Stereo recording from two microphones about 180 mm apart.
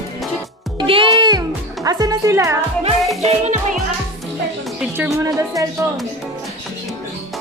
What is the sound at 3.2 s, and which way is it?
Music, 40° right (ahead or behind).